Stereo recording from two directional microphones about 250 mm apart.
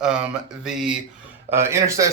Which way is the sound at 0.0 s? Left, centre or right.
Centre.